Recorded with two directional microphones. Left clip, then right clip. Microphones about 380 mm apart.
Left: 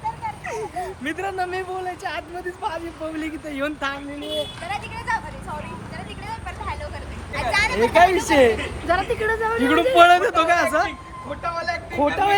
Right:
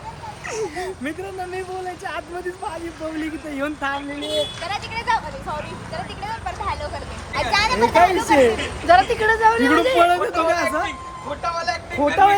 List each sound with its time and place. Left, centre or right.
3.5 s speech: centre
4.7 s vehicle: centre
6.2 s a sound: centre
7.8 s speech: centre
8.9 s speech: right
10.0 s speech: centre